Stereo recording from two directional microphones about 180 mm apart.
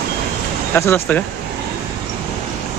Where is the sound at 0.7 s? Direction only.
10° left (ahead or behind).